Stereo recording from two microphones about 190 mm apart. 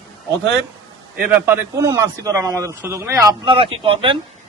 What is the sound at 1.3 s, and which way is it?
A man's voice, 15° right (ahead or behind).